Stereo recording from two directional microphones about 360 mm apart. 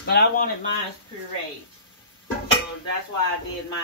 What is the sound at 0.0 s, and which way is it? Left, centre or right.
Speech, left.